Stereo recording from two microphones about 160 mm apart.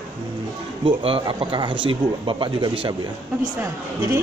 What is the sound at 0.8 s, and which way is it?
Speech, 35° right (ahead or behind).